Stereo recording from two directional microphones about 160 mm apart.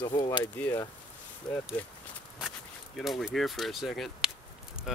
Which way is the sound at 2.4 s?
Centre (ahead or behind).